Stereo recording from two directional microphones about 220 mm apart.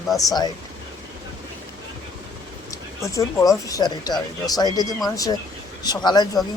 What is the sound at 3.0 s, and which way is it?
Speech, 15° left (ahead or behind).